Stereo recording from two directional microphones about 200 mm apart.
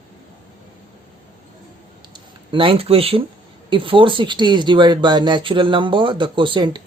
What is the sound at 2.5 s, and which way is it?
Speech, 25° right (ahead or behind).